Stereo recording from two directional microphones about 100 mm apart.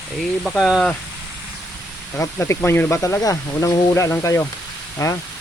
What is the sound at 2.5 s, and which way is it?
Speech, 25° left (ahead or behind).